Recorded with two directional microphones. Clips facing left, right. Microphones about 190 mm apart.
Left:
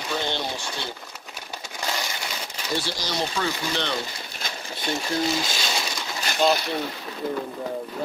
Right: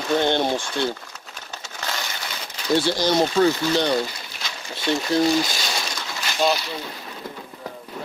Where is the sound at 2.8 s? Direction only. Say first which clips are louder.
Right 10 dB; 55° right (ahead or behind).